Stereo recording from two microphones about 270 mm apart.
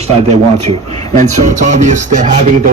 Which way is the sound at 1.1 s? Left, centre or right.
Right.